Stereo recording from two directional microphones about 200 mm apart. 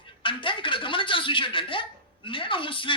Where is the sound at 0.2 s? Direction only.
25° left (ahead or behind).